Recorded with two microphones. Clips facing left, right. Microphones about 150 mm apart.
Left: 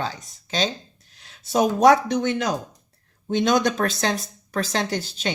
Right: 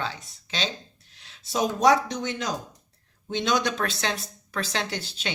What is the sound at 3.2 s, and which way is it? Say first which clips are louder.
Speech: left 5 dB; 50° left (ahead or behind).